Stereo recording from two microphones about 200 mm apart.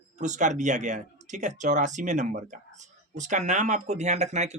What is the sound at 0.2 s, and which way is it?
Speech, 35° right (ahead or behind).